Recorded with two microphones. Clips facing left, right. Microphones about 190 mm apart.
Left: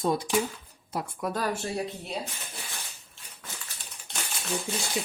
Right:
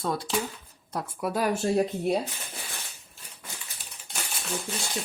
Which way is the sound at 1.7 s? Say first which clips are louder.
Right 9 dB; 50° right (ahead or behind).